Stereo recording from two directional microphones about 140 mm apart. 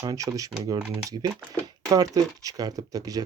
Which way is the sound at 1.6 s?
25° right (ahead or behind).